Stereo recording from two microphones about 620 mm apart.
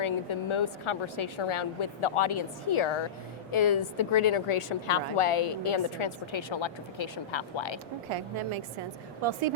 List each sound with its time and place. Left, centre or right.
0.0 s a woman's voice: left
8.1 s a woman's voice: right